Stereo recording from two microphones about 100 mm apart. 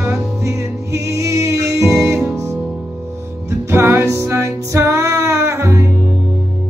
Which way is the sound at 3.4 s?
25° right (ahead or behind).